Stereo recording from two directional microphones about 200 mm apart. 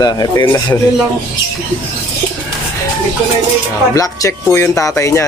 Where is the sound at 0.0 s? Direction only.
20° left (ahead or behind).